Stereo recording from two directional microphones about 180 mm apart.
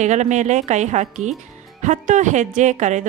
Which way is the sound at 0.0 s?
40° right (ahead or behind).